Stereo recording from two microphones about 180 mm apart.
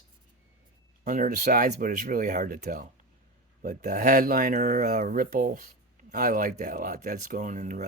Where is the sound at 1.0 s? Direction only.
45° right (ahead or behind).